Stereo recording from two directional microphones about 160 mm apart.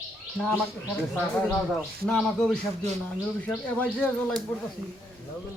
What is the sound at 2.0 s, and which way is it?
A man's voice, 5° left (ahead or behind).